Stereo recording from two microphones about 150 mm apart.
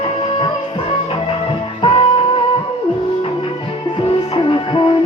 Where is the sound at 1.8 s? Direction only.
35° left (ahead or behind).